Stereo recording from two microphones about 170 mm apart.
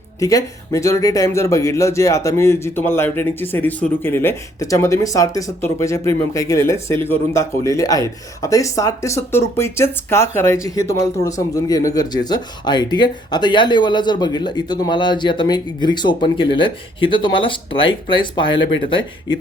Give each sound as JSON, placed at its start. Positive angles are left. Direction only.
{"t": 0.2, "sound": "speech", "side_deg": 20}